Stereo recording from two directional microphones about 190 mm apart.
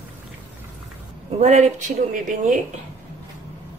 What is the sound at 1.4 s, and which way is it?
Speech, 35° right (ahead or behind).